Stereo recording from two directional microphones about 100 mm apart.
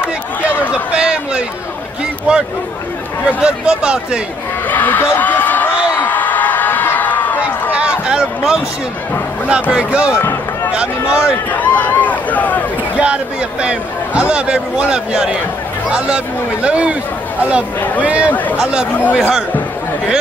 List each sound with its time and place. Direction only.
0.9 s a sound: 10° right (ahead or behind)
3.3 s a man's voice: 10° right (ahead or behind)
4.6 s a sound: 15° left (ahead or behind)
7.7 s a sound: 10° right (ahead or behind)
9.5 s a man's voice: 10° right (ahead or behind)
11.5 s speech: 15° left (ahead or behind)
13.0 s a man's voice: 10° right (ahead or behind)
16.6 s a man's voice: 10° right (ahead or behind)
17.7 s speech: 15° left (ahead or behind)
18.0 s a man's voice: 15° right (ahead or behind)
18.9 s speech: 15° left (ahead or behind)
19.1 s speech: 5° right (ahead or behind)